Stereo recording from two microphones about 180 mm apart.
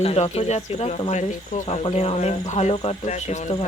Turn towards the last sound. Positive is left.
turn(degrees=35)  # may be behind; listen again after turning